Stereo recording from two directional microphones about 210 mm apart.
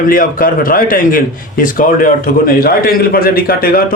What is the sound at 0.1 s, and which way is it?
A man's voice, 40° left (ahead or behind).